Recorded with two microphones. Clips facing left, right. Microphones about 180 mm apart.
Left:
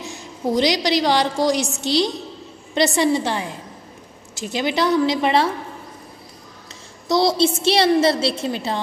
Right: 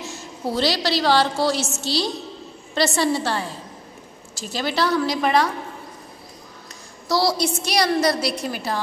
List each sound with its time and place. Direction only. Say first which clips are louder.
0.0 s a woman's voice: left 3 dB; 15° left (ahead or behind)
7.1 s a woman's voice: left 4 dB; 20° left (ahead or behind)